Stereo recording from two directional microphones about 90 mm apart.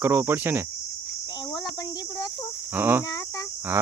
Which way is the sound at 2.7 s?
25° right (ahead or behind).